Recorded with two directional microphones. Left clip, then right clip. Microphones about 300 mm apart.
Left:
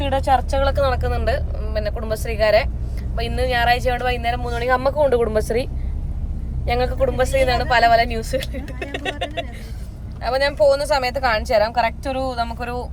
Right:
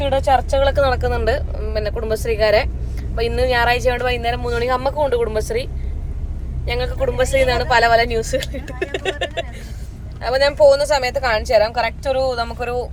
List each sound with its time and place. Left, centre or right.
0.1 s speech: centre
6.7 s speech: centre
7.2 s speech: centre